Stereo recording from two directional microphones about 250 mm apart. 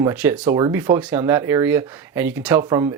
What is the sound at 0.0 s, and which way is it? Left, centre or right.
Speech, centre.